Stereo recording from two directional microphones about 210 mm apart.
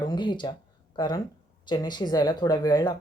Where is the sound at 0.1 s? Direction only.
20° left (ahead or behind).